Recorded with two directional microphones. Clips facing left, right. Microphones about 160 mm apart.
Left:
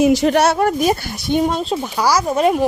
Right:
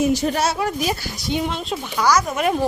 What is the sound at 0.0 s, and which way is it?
Speech, 90° left.